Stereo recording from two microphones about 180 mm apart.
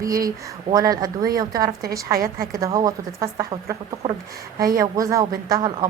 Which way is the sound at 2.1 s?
55° right (ahead or behind).